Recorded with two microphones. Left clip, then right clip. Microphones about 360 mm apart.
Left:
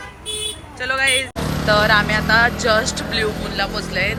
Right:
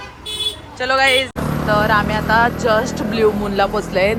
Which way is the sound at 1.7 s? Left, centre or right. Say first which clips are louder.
Left 1 dB; centre.